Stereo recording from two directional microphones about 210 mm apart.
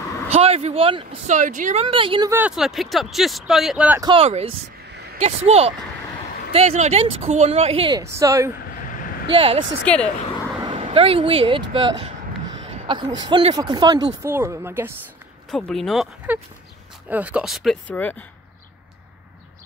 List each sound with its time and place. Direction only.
0.3 s speech: 30° right (ahead or behind)
2.3 s speech: 5° right (ahead or behind)
4.0 s speech: 25° right (ahead or behind)
8.0 s speech: 15° right (ahead or behind)
9.3 s speech: 25° right (ahead or behind)
9.9 s speech: 5° left (ahead or behind)
10.6 s speech: 25° right (ahead or behind)
11.7 s a sound: 25° right (ahead or behind)
13.2 s speech: 25° right (ahead or behind)
15.5 s speech: centre (ahead or behind)